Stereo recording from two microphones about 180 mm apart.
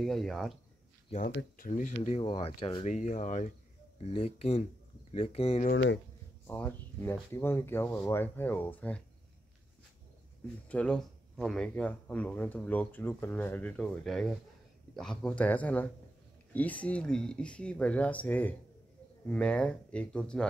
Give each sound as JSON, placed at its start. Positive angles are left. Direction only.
{"t": 0.0, "sound": "speech", "side_deg": 0}
{"t": 1.1, "sound": "speech", "side_deg": 45}
{"t": 2.0, "sound": "speech", "side_deg": 30}
{"t": 5.7, "sound": "speech", "side_deg": 70}
{"t": 6.4, "sound": "speech", "side_deg": 10}
{"t": 10.7, "sound": "speech", "side_deg": 5}